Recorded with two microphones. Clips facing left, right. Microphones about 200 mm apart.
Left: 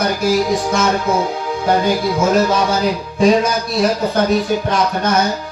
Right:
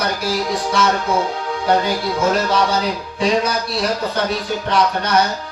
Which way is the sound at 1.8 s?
45° left (ahead or behind).